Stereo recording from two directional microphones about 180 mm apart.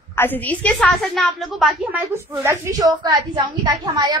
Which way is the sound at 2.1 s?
10° right (ahead or behind).